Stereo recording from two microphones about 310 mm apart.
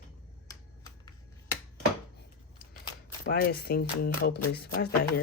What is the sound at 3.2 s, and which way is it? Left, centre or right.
Speech, left.